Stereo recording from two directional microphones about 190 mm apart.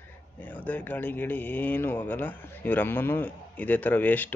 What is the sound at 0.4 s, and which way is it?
Speech, 10° left (ahead or behind).